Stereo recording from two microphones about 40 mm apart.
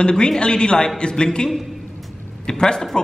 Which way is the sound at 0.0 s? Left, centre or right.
Centre.